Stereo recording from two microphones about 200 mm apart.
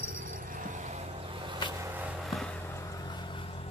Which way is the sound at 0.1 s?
45° right (ahead or behind).